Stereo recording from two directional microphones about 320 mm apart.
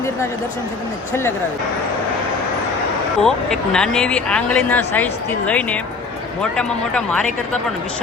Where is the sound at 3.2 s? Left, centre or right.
Centre.